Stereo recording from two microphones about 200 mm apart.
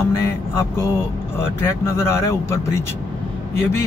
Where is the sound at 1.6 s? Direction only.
15° left (ahead or behind).